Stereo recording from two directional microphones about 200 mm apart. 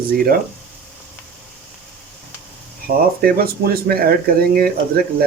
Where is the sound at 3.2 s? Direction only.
50° right (ahead or behind).